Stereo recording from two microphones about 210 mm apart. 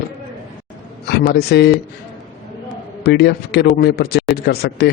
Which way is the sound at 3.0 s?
50° left (ahead or behind).